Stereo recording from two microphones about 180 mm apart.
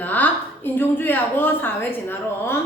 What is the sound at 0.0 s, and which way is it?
A woman's voice, 10° left (ahead or behind).